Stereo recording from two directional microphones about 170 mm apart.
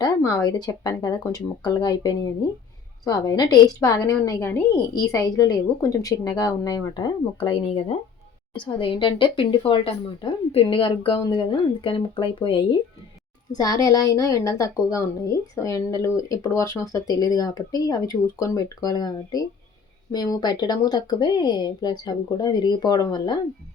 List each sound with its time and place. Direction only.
0.0 s a woman's voice: 20° left (ahead or behind)
13.5 s a woman's voice: 20° left (ahead or behind)